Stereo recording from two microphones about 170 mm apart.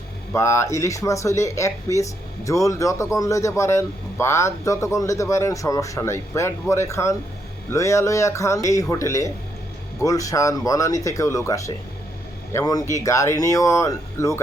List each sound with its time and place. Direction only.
0.3 s speech: 15° left (ahead or behind)